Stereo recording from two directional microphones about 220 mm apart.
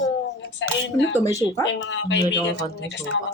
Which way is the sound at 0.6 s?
55° left (ahead or behind).